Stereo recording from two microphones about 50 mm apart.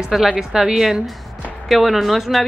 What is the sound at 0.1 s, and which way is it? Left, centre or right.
A woman's voice, centre.